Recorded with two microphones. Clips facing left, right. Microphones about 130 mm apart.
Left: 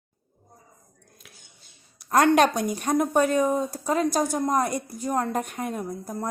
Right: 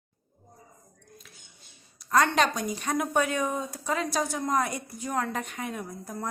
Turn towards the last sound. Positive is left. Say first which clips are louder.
# left 4 dB
turn(degrees=40)  # may be behind; listen again after turning